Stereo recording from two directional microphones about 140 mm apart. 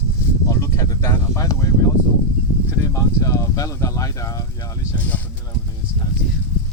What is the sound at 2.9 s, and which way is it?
Speech, 20° left (ahead or behind).